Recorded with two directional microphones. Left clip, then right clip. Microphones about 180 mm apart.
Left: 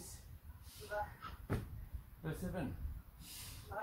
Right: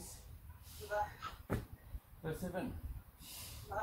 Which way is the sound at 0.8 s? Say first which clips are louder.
Right 4 dB; 20° right (ahead or behind).